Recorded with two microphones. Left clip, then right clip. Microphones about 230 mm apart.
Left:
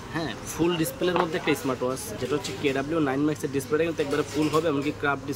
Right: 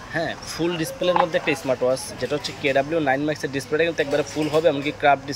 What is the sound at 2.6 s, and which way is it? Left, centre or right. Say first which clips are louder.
Speech: right 6 dB; centre.